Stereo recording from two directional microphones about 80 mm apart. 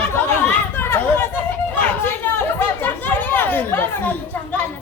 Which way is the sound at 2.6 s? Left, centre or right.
Left.